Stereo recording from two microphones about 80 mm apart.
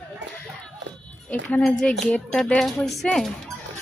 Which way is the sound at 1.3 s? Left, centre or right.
Centre.